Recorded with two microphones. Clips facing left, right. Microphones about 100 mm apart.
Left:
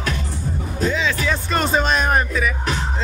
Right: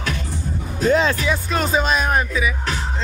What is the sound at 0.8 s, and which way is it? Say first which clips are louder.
Music: right 5 dB; 45° right (ahead or behind).